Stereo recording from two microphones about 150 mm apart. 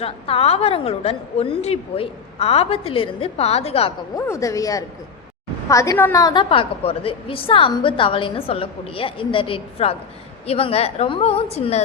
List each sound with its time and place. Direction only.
0.0 s a woman's voice: 40° left (ahead or behind)
4.1 s a woman's voice: 20° left (ahead or behind); by 11.8 s 45° left (ahead or behind)